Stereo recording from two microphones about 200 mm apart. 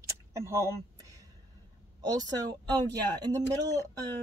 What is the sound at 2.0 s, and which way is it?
Speech, 20° right (ahead or behind).